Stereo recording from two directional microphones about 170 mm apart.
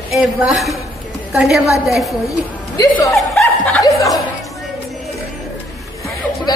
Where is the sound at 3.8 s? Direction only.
20° left (ahead or behind).